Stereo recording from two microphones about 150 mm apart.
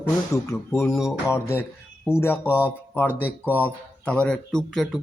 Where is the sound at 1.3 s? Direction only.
15° left (ahead or behind).